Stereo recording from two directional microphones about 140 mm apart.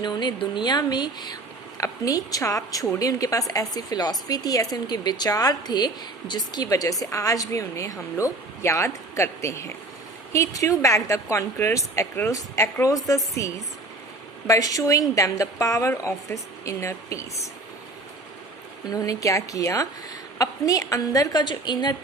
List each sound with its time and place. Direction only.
0.0 s a woman's voice: 30° left (ahead or behind)
18.9 s a woman's voice: 25° left (ahead or behind)